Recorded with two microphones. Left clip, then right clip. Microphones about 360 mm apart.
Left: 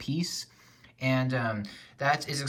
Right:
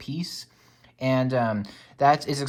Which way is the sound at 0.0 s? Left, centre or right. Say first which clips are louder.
Left 1 dB; centre.